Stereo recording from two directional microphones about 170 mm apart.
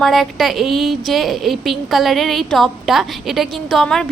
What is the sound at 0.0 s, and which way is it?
A woman's voice, centre (ahead or behind).